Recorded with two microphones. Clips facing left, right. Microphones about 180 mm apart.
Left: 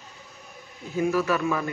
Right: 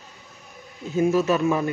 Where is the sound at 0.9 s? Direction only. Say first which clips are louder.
Right 4 dB; 20° right (ahead or behind).